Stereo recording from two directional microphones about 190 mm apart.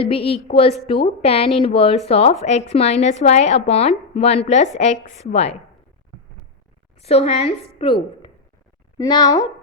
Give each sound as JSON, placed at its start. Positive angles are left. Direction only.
{"t": 0.0, "sound": "a woman's voice", "side_deg": 30}
{"t": 7.0, "sound": "a woman's voice", "side_deg": 35}
{"t": 9.0, "sound": "a woman's voice", "side_deg": 20}